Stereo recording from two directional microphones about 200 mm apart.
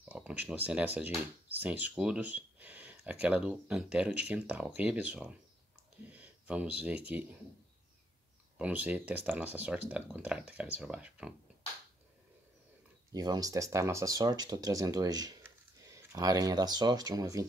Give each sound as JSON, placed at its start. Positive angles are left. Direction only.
{"t": 0.0, "sound": "speech", "side_deg": -5}
{"t": 8.5, "sound": "speech", "side_deg": -10}
{"t": 13.1, "sound": "speech", "side_deg": -20}